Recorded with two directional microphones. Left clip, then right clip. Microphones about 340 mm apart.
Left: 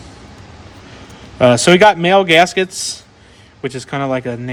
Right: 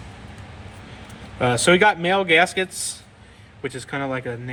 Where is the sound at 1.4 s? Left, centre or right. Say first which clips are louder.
Left 8 dB; left.